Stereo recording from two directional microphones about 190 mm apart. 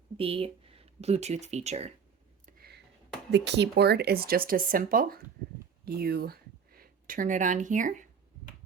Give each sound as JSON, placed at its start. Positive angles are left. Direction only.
{"t": 0.2, "sound": "speech", "side_deg": -30}
{"t": 2.5, "sound": "a sound", "side_deg": -55}
{"t": 3.3, "sound": "speech", "side_deg": -65}